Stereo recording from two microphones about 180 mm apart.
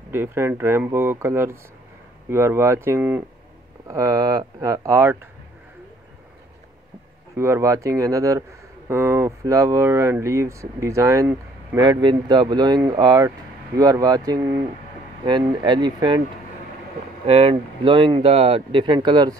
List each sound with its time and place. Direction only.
0.1 s speech: 15° right (ahead or behind)
7.3 s speech: 15° right (ahead or behind)
17.3 s speech: 35° right (ahead or behind)